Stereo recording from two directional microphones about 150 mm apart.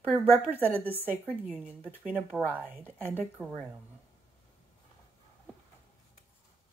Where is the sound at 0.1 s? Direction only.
10° right (ahead or behind).